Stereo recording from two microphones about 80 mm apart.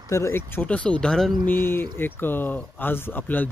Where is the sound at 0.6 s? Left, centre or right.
Centre.